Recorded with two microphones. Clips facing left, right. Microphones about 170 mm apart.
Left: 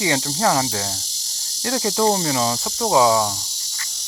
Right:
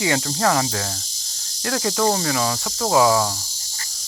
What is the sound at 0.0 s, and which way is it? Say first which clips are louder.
Speech: even; 20° left (ahead or behind).